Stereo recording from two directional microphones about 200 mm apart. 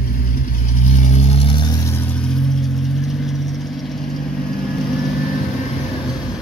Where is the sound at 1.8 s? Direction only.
5° left (ahead or behind).